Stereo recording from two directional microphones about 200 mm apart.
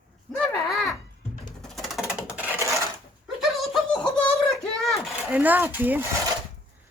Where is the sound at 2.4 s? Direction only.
15° left (ahead or behind).